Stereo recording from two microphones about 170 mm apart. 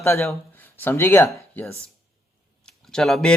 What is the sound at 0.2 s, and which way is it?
Speech, 5° left (ahead or behind).